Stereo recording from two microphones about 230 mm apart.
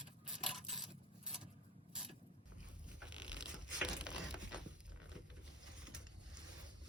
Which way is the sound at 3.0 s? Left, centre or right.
Centre.